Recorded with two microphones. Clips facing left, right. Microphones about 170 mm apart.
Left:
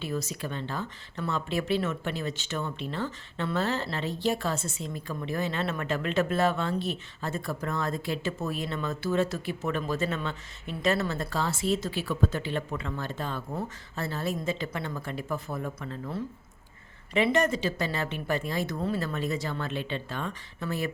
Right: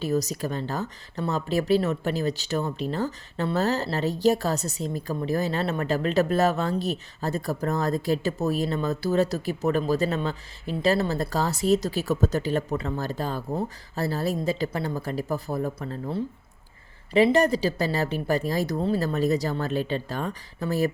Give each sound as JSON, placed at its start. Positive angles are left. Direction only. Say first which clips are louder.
{"t": 0.0, "sound": "speech", "louder": "right 7 dB", "side_deg": -40}